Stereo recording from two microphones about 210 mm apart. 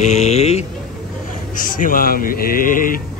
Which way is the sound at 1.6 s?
40° left (ahead or behind).